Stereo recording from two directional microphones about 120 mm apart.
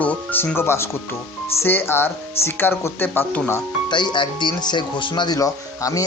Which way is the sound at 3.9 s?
40° left (ahead or behind).